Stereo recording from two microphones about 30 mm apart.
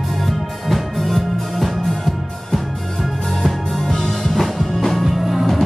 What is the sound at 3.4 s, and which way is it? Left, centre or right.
Music, centre.